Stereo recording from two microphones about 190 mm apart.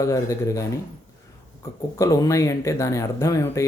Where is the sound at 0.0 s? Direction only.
15° left (ahead or behind).